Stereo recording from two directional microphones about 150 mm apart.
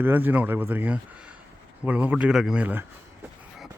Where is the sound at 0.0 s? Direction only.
15° right (ahead or behind).